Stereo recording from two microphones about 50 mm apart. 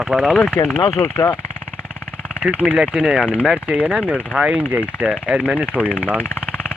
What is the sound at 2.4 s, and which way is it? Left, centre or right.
Speech, right.